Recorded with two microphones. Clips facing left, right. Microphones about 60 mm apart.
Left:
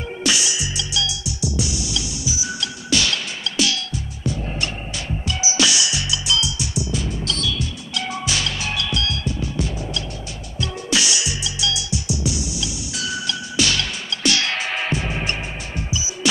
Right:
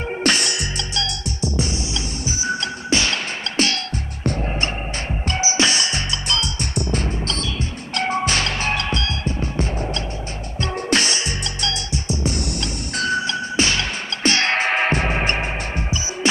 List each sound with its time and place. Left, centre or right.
0.2 s music: right
5.4 s music: right
7.2 s music: right